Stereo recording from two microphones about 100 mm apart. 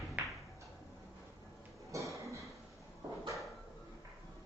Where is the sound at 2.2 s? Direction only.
30° right (ahead or behind).